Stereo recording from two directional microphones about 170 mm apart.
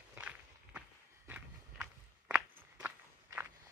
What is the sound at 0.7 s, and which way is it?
Walk, 10° right (ahead or behind).